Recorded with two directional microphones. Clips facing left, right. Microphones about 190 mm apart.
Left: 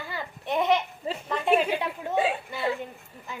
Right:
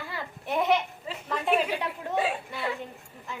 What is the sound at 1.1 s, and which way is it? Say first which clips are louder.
Speech: left 6 dB; 35° left (ahead or behind).